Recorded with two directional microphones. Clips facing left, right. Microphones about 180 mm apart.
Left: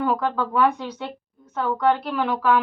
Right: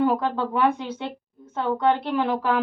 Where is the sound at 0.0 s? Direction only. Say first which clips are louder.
Right 1 dB; 25° right (ahead or behind).